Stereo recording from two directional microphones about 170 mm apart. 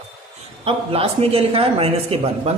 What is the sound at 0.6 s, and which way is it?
A man's voice, 35° right (ahead or behind).